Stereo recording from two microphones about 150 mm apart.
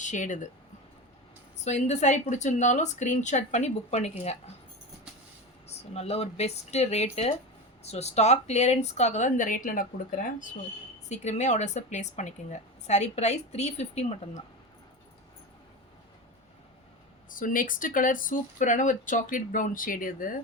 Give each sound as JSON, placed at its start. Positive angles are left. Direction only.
{"t": 0.0, "sound": "speech", "side_deg": 55}
{"t": 1.6, "sound": "a woman's voice", "side_deg": 50}
{"t": 5.7, "sound": "a woman's voice", "side_deg": 45}
{"t": 11.1, "sound": "a woman's voice", "side_deg": 50}
{"t": 17.2, "sound": "speech", "side_deg": 65}